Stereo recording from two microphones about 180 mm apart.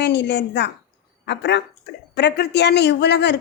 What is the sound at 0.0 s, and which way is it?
A woman's voice, 70° left (ahead or behind).